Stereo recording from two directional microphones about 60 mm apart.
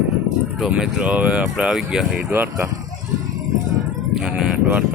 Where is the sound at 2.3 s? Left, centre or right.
Right.